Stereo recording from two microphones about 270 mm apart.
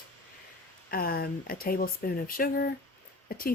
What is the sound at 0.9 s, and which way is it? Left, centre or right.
Speech, left.